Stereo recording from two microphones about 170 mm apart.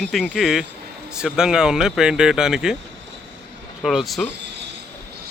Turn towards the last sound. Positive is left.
turn(degrees=0)  # may be behind; listen again after turning